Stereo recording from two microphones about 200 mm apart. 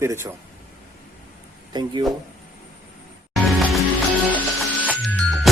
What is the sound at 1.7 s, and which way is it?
Speech, 20° right (ahead or behind).